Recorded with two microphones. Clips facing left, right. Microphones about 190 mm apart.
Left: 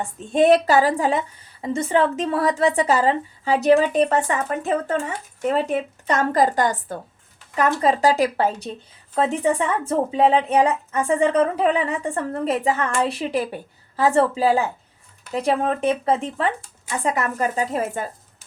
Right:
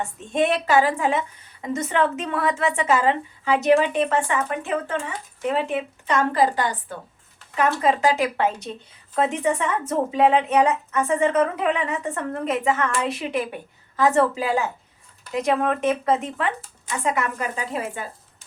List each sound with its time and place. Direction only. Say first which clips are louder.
0.0 s a woman's voice: left 5 dB; 35° left (ahead or behind)